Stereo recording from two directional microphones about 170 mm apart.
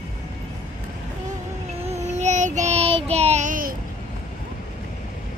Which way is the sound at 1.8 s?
40° right (ahead or behind).